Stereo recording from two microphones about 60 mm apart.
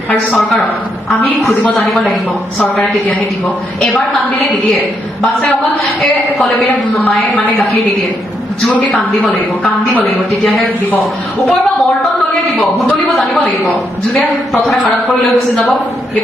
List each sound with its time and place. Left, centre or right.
0.3 s a woman's voice: centre
1.7 s a woman's voice: centre
6.0 s a woman's voice: centre
13.4 s a man's voice: left
15.3 s a woman's voice: centre